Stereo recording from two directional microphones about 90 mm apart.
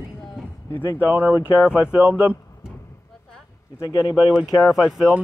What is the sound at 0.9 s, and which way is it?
Speech, 20° right (ahead or behind).